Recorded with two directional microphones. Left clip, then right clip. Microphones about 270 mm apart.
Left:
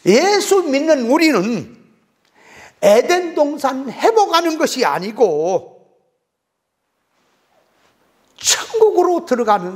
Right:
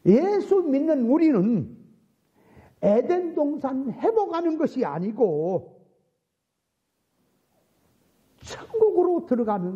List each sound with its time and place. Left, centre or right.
0.0 s a woman's voice: centre
5.6 s a sound: left
8.4 s speech: centre
9.2 s a woman's voice: centre